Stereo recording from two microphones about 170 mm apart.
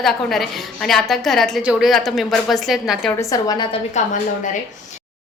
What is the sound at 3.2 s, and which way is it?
Speech, 20° left (ahead or behind).